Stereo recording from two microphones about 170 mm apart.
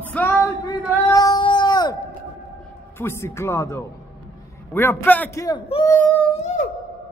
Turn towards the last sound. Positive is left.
turn(degrees=40)  # may be behind; listen again after turning